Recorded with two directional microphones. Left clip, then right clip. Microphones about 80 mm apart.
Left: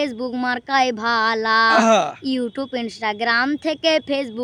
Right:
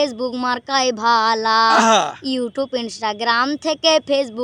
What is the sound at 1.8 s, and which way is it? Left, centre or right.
Speech, left.